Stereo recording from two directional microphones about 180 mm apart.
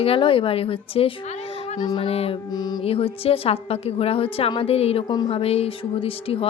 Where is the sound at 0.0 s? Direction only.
30° left (ahead or behind).